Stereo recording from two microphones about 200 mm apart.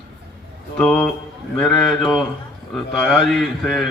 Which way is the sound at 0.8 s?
5° left (ahead or behind).